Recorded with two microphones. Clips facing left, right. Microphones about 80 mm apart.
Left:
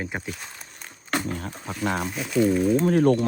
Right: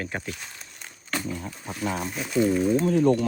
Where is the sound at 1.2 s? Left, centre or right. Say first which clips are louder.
Left 2 dB; left.